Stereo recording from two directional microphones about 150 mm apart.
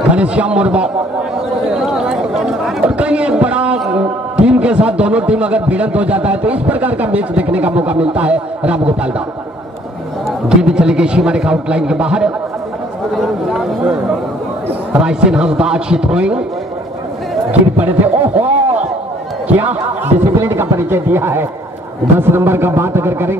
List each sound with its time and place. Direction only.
0.1 s a man's voice: 10° right (ahead or behind)
10.5 s a man's voice: 5° right (ahead or behind)
17.5 s a man's voice: 10° right (ahead or behind)